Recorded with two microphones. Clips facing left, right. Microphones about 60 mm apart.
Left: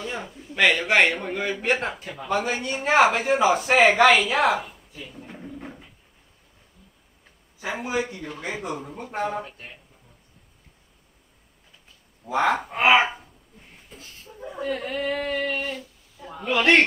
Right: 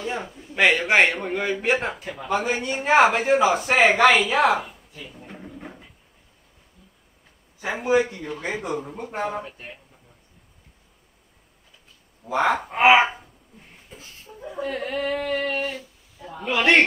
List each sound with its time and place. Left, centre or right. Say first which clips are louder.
0.0 s a sound: right 3 dB; centre
0.7 s speech: right 1 dB; centre
7.6 s speech: right 6 dB; centre
12.4 s speech: right 3 dB; centre
14.6 s speech: right 1 dB; centre